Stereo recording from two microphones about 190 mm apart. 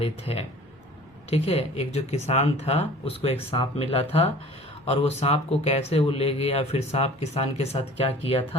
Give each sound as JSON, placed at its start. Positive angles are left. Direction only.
{"t": 0.0, "sound": "speech", "side_deg": 30}